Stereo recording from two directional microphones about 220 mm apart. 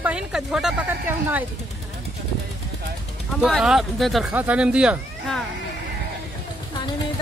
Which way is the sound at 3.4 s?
5° right (ahead or behind).